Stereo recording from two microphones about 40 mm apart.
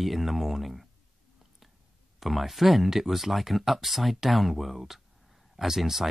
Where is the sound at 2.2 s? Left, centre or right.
Centre.